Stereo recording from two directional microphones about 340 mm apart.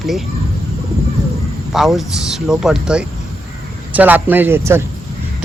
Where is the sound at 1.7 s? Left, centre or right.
Centre.